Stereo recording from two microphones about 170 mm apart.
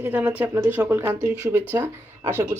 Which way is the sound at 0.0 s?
10° right (ahead or behind).